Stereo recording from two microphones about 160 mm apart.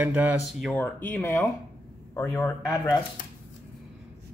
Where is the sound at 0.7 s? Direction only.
10° left (ahead or behind).